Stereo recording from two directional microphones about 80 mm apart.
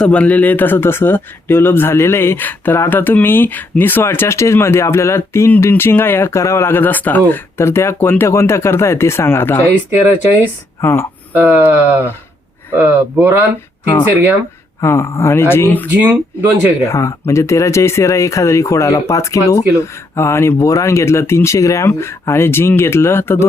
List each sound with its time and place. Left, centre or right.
0.0 s speech: centre
10.8 s speech: left
11.3 s speech: right
14.8 s speech: left
16.0 s speech: right
16.9 s speech: left